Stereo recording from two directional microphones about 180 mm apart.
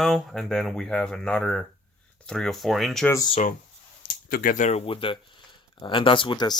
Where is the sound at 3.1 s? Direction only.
20° left (ahead or behind).